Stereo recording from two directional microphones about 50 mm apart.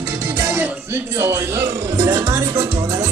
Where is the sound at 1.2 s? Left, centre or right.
Right.